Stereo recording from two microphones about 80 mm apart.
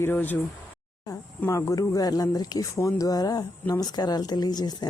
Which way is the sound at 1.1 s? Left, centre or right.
Left.